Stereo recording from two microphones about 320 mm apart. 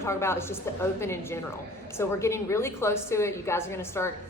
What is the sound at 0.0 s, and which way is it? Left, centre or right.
A woman's voice, centre.